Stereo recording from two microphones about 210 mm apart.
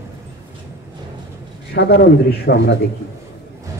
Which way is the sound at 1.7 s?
50° left (ahead or behind).